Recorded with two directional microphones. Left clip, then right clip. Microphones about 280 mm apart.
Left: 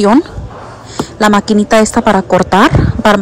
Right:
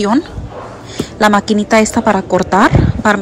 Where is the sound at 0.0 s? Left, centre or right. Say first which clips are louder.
Left 5 dB; centre.